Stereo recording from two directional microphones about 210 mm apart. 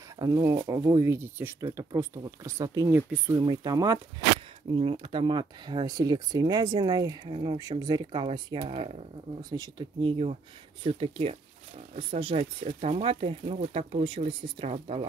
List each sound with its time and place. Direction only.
0.2 s speech: 15° right (ahead or behind)
9.4 s speech: 20° right (ahead or behind)